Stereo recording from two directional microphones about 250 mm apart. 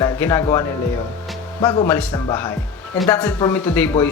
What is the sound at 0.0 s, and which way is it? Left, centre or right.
Speech, centre.